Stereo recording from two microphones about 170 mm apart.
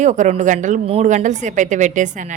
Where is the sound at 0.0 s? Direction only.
45° right (ahead or behind).